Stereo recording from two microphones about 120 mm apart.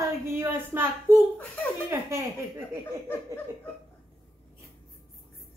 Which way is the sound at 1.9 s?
25° right (ahead or behind).